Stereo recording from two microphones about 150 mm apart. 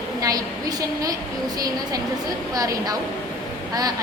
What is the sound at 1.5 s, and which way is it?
A woman's voice, 25° right (ahead or behind).